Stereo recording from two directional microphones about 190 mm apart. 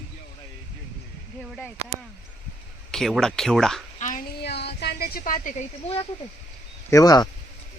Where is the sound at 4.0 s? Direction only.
45° left (ahead or behind).